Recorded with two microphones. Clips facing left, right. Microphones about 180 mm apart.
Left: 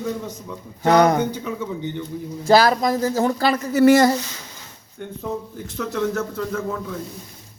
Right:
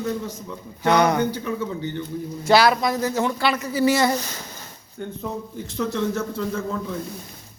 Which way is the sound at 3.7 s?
50° left (ahead or behind).